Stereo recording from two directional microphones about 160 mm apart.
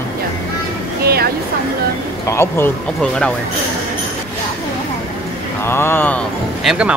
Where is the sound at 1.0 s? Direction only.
75° right (ahead or behind).